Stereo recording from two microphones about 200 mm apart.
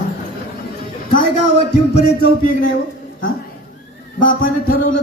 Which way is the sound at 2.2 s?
45° left (ahead or behind).